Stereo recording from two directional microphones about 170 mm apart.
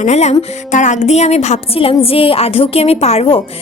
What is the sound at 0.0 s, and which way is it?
Speech, 40° left (ahead or behind).